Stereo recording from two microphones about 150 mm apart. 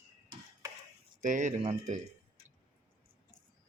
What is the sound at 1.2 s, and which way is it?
Speech, 55° right (ahead or behind).